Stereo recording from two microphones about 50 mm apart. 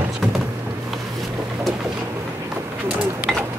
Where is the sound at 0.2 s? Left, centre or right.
Centre.